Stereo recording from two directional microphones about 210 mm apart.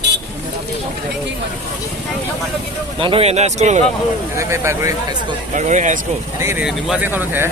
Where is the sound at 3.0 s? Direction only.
25° right (ahead or behind).